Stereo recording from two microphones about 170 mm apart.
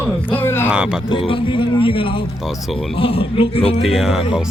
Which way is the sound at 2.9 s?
35° left (ahead or behind).